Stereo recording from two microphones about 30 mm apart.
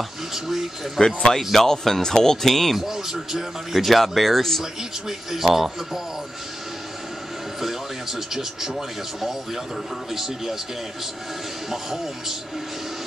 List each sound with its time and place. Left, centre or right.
0.3 s speech: centre
0.9 s speech: centre
2.7 s speech: centre
3.7 s speech: centre
5.0 s speech: centre
7.6 s speech: centre
11.7 s speech: centre